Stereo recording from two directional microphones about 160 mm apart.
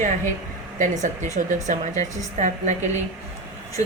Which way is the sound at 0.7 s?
50° right (ahead or behind).